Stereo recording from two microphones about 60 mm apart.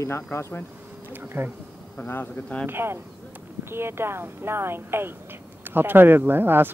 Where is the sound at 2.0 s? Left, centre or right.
Left.